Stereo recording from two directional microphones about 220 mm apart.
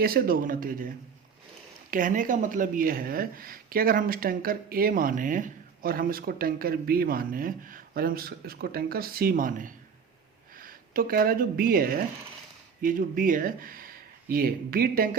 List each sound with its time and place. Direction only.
0.0 s speech: 40° right (ahead or behind)